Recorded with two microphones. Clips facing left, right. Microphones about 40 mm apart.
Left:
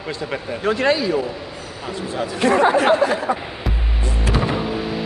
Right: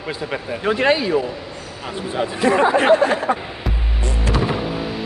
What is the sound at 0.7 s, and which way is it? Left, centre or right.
Speech, right.